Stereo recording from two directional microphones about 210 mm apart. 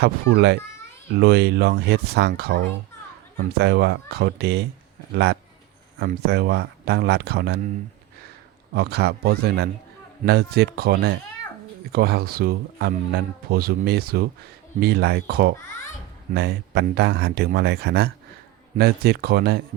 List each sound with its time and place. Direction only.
0.0 s speech: 50° right (ahead or behind)
8.7 s speech: 50° right (ahead or behind)